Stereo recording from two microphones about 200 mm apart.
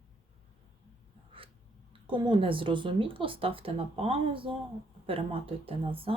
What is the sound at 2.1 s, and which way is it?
Speech, 25° right (ahead or behind).